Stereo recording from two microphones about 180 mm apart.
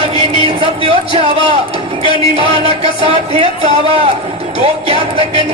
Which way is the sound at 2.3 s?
30° right (ahead or behind).